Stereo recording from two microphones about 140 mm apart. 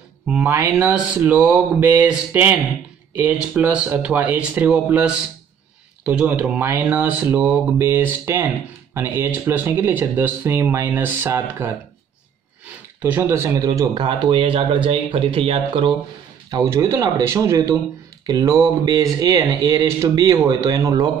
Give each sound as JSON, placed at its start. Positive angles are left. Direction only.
{"t": 0.5, "sound": "speech", "side_deg": -15}
{"t": 13.0, "sound": "speech", "side_deg": -20}
{"t": 16.4, "sound": "speech", "side_deg": -25}